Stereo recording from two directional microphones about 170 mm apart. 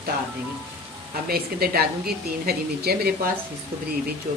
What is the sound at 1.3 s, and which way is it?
Speech, 65° right (ahead or behind).